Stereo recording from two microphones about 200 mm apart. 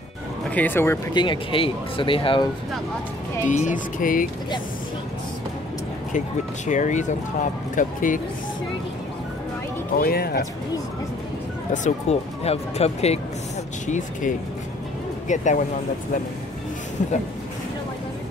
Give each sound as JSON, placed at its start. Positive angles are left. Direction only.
{"t": 0.5, "sound": "speech", "side_deg": 10}
{"t": 1.1, "sound": "speech", "side_deg": 25}
{"t": 3.4, "sound": "speech", "side_deg": 40}
{"t": 6.1, "sound": "speech", "side_deg": 40}
{"t": 9.9, "sound": "speech", "side_deg": 50}
{"t": 11.7, "sound": "speech", "side_deg": 35}